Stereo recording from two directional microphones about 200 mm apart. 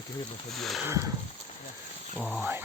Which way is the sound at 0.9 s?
15° right (ahead or behind).